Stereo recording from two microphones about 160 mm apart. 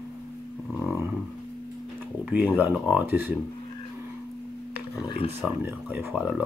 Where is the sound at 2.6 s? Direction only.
10° right (ahead or behind).